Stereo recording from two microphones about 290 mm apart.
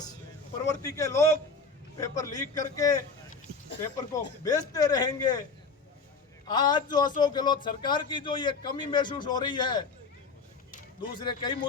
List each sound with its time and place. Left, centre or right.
0.7 s a man's voice: centre
4.1 s a man's voice: centre
6.5 s a man's voice: centre
11.2 s a man's voice: centre